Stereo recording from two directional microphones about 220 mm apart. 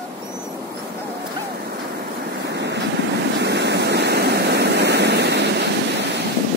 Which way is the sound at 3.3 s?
50° right (ahead or behind).